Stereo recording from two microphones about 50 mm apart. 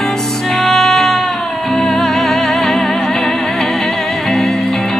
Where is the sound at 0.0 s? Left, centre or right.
Centre.